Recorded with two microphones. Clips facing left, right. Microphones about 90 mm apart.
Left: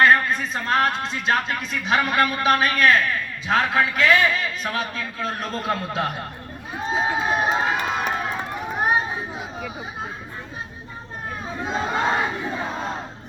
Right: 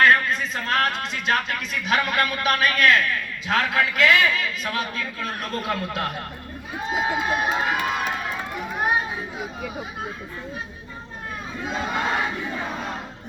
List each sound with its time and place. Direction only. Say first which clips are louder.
0.0 s a man's voice: left 1 dB; 25° left (ahead or behind)
11.6 s a man's voice: left 3 dB; 30° left (ahead or behind)